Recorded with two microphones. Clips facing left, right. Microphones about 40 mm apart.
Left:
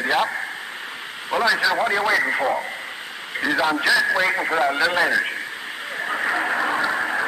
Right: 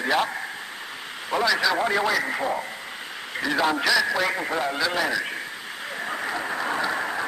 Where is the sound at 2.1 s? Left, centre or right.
Left.